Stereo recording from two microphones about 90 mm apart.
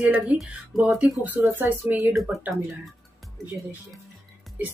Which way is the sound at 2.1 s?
Centre (ahead or behind).